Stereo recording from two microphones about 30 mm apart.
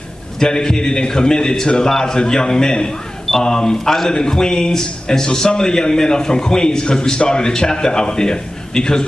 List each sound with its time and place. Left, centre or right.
0.4 s a man's voice: left
3.7 s a man's voice: centre
4.3 s a man's voice: left